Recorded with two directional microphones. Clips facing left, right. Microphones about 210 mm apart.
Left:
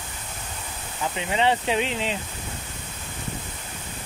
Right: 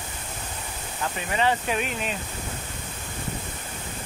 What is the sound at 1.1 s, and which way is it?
Speech, 20° left (ahead or behind).